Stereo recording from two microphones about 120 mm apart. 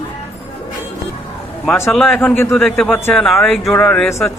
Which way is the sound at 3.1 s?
5° left (ahead or behind).